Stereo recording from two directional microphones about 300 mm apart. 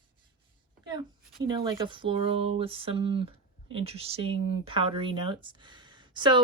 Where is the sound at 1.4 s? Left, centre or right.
Centre.